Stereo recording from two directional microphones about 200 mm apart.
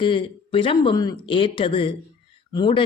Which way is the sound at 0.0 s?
25° left (ahead or behind).